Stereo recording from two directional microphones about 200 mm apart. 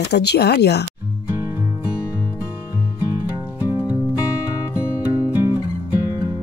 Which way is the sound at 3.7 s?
20° left (ahead or behind).